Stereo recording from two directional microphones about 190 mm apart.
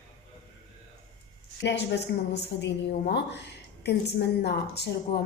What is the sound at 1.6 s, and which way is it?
A woman's voice, 65° left (ahead or behind).